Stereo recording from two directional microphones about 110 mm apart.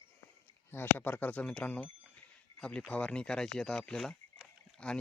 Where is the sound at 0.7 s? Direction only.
20° left (ahead or behind).